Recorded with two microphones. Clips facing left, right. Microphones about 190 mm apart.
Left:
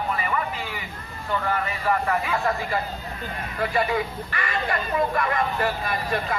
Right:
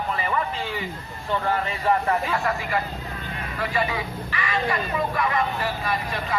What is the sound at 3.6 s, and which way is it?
Speech, 50° left (ahead or behind).